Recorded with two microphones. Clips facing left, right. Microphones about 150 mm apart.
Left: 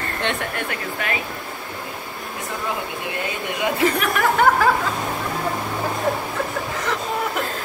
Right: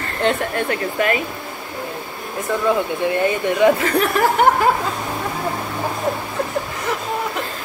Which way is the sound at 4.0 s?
30° right (ahead or behind).